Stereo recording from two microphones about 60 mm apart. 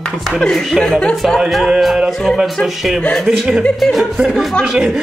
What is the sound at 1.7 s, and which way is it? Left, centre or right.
Speech, centre.